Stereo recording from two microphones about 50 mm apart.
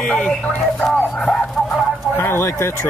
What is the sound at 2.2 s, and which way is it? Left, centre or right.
Speech, left.